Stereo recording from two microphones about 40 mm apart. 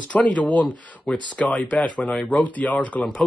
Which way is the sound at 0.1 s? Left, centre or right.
Left.